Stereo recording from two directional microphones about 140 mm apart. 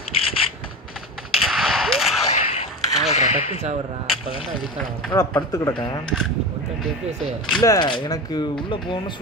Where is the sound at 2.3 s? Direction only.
45° left (ahead or behind).